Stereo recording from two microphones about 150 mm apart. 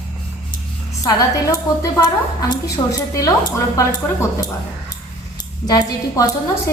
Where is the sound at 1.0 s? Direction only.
25° left (ahead or behind).